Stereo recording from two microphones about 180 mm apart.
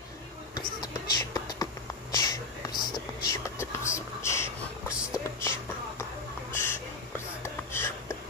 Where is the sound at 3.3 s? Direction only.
15° left (ahead or behind).